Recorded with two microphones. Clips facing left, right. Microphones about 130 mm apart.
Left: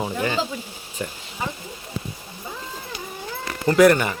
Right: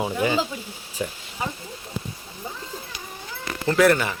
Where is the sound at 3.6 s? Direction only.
Centre (ahead or behind).